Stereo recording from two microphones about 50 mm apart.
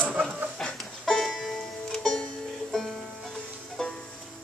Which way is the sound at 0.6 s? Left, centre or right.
Centre.